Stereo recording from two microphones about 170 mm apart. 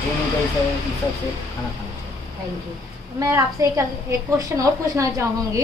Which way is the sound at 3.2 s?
20° right (ahead or behind).